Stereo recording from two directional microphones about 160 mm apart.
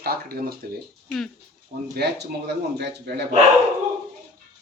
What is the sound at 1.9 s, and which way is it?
Speech, 90° right.